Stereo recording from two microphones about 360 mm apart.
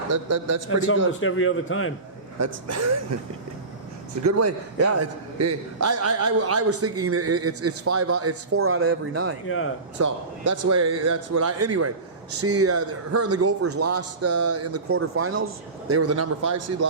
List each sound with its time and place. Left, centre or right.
0.1 s speech: right
1.2 s a man's voice: left
2.4 s speech: right
4.2 s a man's voice: right
9.5 s a man's voice: left
10.0 s a man's voice: right